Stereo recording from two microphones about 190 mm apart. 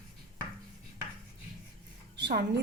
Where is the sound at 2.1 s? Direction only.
65° right (ahead or behind).